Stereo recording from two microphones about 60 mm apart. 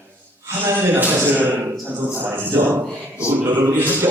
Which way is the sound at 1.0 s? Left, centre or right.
Right.